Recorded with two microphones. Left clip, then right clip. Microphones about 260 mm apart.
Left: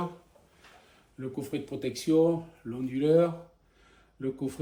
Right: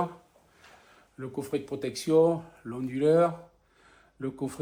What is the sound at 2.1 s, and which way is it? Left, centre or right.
Speech, right.